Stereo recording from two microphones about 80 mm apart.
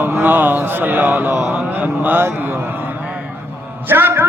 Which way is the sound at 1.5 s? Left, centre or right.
Right.